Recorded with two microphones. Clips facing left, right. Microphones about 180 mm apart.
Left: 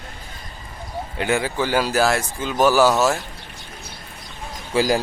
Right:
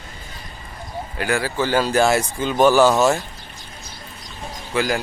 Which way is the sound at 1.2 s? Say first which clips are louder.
Even; 20° left (ahead or behind).